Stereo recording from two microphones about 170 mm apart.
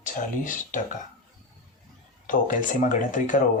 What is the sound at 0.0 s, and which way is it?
Speech, 50° left (ahead or behind).